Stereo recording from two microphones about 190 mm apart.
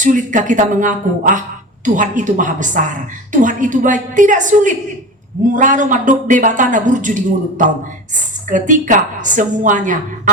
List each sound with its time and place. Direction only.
0.0 s a woman's voice: 40° right (ahead or behind)